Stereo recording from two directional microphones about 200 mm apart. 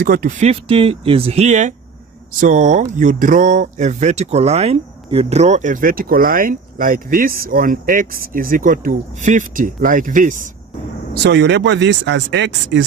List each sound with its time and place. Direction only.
0.0 s speech: 45° right (ahead or behind)
11.1 s speech: 60° right (ahead or behind)